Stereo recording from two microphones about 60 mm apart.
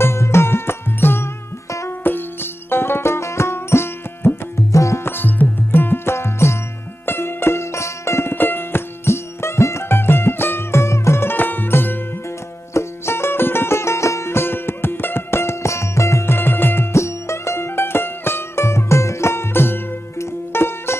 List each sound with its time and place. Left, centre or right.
0.0 s music: left
4.7 s music: left
5.0 s music: left
6.1 s music: left
8.4 s music: left
10.7 s music: left
11.2 s music: left
12.7 s music: left
16.9 s music: left